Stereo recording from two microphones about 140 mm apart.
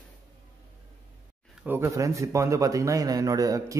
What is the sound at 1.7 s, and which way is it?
A man's voice, 20° right (ahead or behind).